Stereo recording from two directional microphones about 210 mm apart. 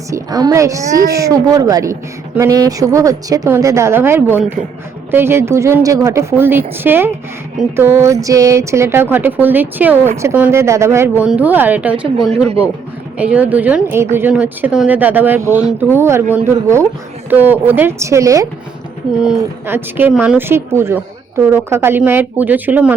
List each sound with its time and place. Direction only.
0.1 s a woman's voice: 15° right (ahead or behind)
0.8 s speech: 45° right (ahead or behind)
1.1 s a woman's voice: 15° right (ahead or behind)